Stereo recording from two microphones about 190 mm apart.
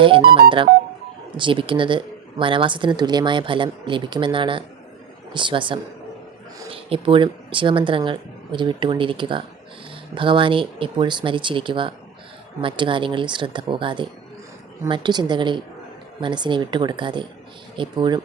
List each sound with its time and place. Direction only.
1.4 s speech: 25° right (ahead or behind)